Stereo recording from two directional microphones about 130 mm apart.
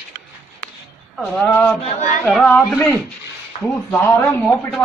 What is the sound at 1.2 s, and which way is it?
Speech, 15° left (ahead or behind).